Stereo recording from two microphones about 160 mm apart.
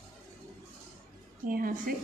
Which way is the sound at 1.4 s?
60° right (ahead or behind).